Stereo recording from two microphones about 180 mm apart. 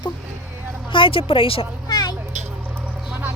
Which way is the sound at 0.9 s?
30° left (ahead or behind).